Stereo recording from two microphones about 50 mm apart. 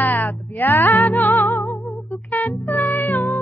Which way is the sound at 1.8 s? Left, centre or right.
Centre.